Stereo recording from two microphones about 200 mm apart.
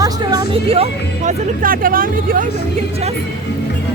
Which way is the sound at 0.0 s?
20° right (ahead or behind).